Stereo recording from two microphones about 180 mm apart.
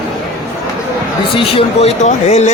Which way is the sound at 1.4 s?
30° left (ahead or behind).